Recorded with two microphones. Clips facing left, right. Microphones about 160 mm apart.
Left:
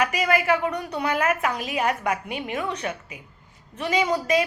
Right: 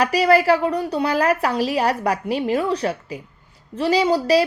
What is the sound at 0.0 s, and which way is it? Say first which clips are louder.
A woman's voice: right 7 dB; 35° right (ahead or behind).